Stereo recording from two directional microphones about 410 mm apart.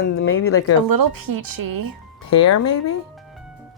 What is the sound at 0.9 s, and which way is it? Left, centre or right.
Speech, right.